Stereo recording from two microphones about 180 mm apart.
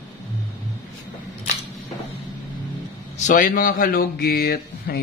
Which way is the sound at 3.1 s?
45° left (ahead or behind).